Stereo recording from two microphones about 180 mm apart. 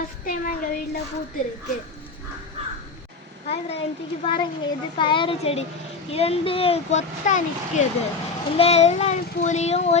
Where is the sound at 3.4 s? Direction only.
35° left (ahead or behind).